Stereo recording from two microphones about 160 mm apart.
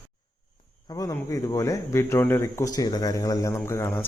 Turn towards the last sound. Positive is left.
turn(degrees=15)  # may be behind; listen again after turning